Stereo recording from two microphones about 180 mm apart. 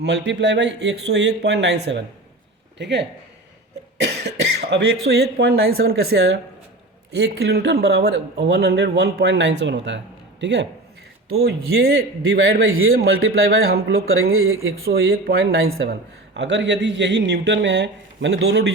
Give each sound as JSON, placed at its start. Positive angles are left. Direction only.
{"t": 0.0, "sound": "speech", "side_deg": -75}
{"t": 11.4, "sound": "a man's voice", "side_deg": -60}
{"t": 14.1, "sound": "a man's voice", "side_deg": -90}
{"t": 14.8, "sound": "speech", "side_deg": -60}